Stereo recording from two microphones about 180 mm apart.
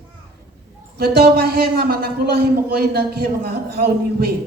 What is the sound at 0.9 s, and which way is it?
A man's voice, 60° right (ahead or behind).